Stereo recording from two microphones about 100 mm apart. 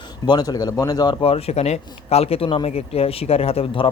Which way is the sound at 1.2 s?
75° left (ahead or behind).